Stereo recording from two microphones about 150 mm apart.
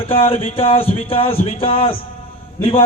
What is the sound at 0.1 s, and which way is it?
Speech, 40° left (ahead or behind).